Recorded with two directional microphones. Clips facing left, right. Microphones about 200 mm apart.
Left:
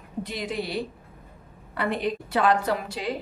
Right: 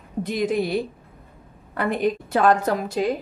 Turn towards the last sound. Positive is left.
turn(degrees=-45)  # may be behind; listen again after turning